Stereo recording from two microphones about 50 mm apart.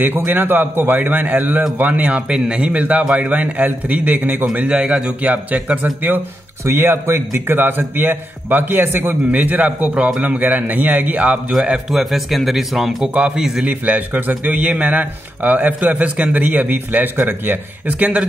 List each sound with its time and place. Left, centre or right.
0.0 s speech: right
4.6 s a man's voice: centre
5.2 s speech: right
6.6 s a man's voice: right
9.3 s speech: right
11.5 s a man's voice: centre
11.9 s speech: centre
13.1 s speech: right
13.4 s a man's voice: centre
13.7 s speech: right